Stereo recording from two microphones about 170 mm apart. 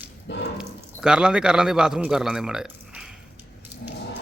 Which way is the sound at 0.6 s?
5° right (ahead or behind).